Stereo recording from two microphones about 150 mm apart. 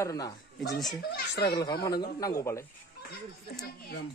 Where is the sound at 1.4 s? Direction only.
25° left (ahead or behind).